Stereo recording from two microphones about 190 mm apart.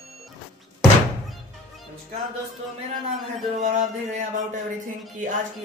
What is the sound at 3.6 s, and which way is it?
Speech, 40° right (ahead or behind).